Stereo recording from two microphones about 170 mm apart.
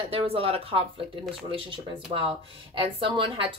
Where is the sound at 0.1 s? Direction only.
35° right (ahead or behind).